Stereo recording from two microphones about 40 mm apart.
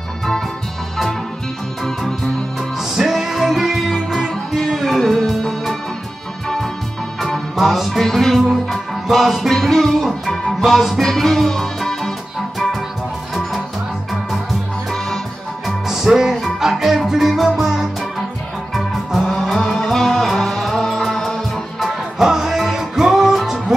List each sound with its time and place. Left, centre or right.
2.8 s music: centre
4.3 s music: centre
7.5 s music: centre
9.5 s music: centre
15.6 s music: centre
19.5 s music: centre
21.7 s music: centre